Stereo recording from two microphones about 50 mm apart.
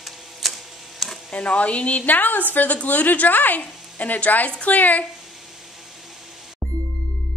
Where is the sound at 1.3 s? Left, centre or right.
Left.